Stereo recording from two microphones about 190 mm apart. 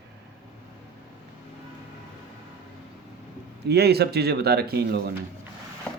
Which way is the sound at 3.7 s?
60° right (ahead or behind).